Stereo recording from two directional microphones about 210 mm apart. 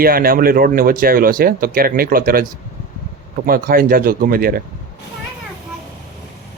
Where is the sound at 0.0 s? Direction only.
45° right (ahead or behind).